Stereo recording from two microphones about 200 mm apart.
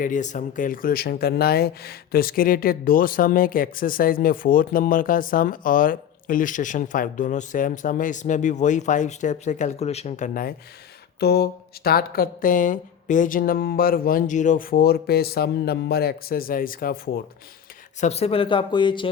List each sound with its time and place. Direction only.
0.0 s speech: 40° left (ahead or behind)
11.2 s speech: 55° left (ahead or behind)
18.0 s speech: 30° left (ahead or behind)